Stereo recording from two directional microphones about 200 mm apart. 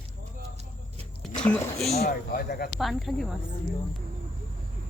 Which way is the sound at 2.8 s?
Centre (ahead or behind).